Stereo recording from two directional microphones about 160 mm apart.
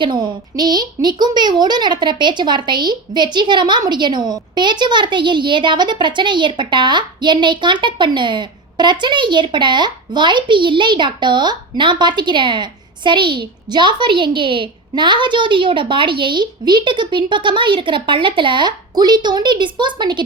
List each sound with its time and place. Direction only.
0.0 s a woman's voice: 30° right (ahead or behind)